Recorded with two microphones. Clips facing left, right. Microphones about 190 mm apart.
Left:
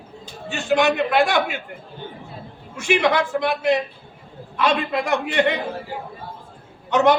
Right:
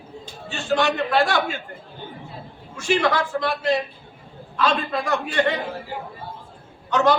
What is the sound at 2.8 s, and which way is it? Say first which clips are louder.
A man's voice: left 2 dB; 20° left (ahead or behind).